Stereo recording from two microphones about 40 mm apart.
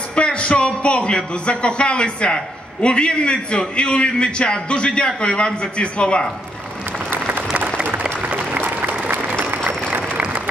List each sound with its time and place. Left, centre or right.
0.1 s a man's voice: left
7.3 s applause: right
8.0 s applause: right
8.5 s applause: right
9.1 s applause: right
10.2 s applause: right